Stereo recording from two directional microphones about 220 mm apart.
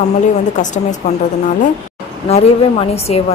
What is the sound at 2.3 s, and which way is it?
Speech, 30° left (ahead or behind).